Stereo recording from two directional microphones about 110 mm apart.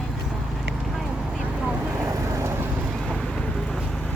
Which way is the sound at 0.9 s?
5° right (ahead or behind).